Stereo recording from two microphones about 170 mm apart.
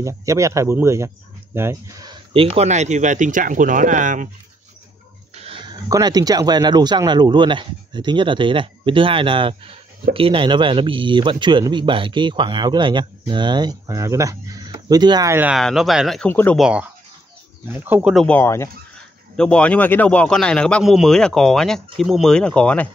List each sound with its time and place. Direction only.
0.0 s speech: 20° right (ahead or behind)
2.3 s speech: 35° right (ahead or behind)
5.3 s speech: 35° right (ahead or behind); by 15.5 s 15° right (ahead or behind)
15.5 s a man's voice: centre (ahead or behind)
16.3 s speech: 10° left (ahead or behind)
16.5 s a man's voice: 5° right (ahead or behind)
18.1 s a man's voice: 5° left (ahead or behind)